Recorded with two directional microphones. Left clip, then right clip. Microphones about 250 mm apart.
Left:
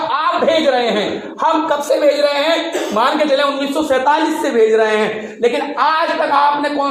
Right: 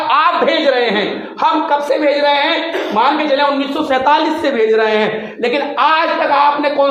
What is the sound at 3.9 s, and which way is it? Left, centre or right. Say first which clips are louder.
A man's voice: right 2 dB; right.